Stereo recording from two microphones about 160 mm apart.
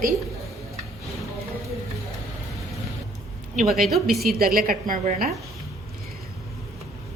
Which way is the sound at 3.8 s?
Centre (ahead or behind).